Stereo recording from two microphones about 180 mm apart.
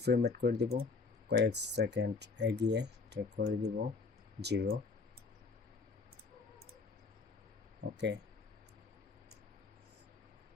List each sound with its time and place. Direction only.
0.0 s speech: 65° right (ahead or behind)
7.9 s speech: 75° right (ahead or behind)